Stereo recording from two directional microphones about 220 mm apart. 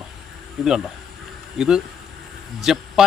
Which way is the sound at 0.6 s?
Centre (ahead or behind).